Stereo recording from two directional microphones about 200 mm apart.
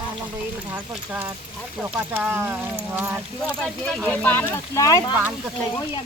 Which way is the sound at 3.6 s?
5° left (ahead or behind).